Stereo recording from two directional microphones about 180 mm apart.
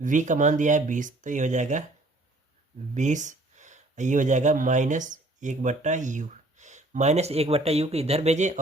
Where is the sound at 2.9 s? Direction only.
40° right (ahead or behind).